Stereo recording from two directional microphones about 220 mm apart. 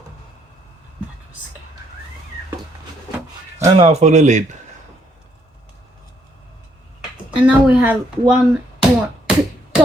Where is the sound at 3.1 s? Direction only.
15° right (ahead or behind).